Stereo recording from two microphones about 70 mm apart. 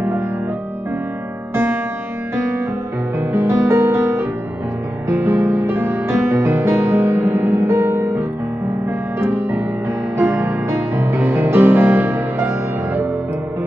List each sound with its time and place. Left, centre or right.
1.5 s music: right
9.3 s music: right